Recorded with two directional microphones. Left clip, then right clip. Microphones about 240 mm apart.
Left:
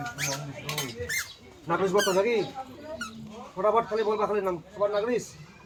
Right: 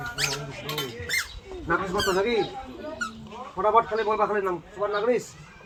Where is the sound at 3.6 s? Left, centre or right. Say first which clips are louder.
Right 1 dB; left.